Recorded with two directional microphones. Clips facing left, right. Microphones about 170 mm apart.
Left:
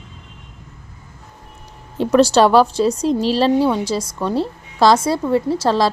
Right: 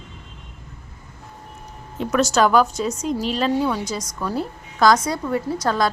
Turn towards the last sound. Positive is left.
turn(degrees=30)  # may be behind; listen again after turning